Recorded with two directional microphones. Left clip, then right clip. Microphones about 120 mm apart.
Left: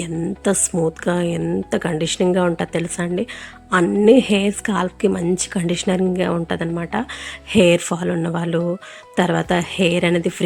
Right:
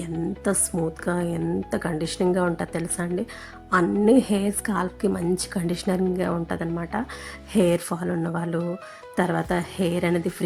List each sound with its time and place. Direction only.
0.0 s speech: 20° left (ahead or behind)